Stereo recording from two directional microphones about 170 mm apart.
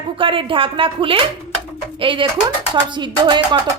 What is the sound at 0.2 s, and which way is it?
Speech, 30° right (ahead or behind).